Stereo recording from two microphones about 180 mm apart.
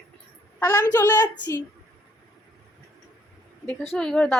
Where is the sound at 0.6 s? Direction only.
20° left (ahead or behind).